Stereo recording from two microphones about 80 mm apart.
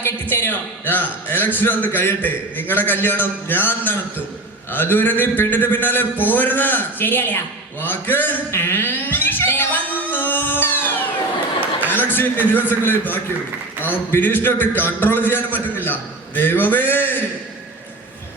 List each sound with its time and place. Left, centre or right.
0.0 s a man's voice: left
8.4 s music: left
11.9 s a man's voice: left